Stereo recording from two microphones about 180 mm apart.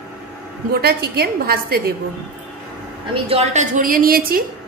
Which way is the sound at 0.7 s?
60° right (ahead or behind).